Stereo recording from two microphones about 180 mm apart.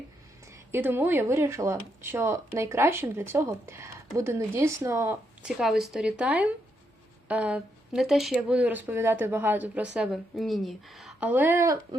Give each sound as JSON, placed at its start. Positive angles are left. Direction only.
{"t": 0.5, "sound": "speech", "side_deg": -10}